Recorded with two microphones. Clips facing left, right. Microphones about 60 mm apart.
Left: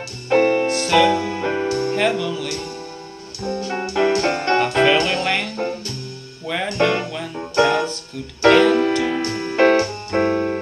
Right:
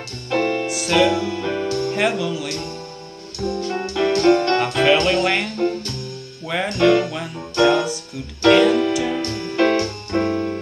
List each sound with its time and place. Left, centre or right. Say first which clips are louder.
0.3 s music: left 5 dB; left
0.7 s music: left 2 dB; centre
1.0 s music: left 1 dB; left
2.0 s speech: left 1 dB; centre
3.3 s music: right 1 dB; left
6.4 s music: right 1 dB; centre
6.7 s music: right 4 dB; left